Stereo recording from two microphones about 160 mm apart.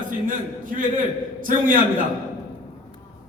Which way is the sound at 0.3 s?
60° right (ahead or behind).